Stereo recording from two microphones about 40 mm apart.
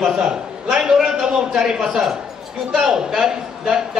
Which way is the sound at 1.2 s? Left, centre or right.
Centre.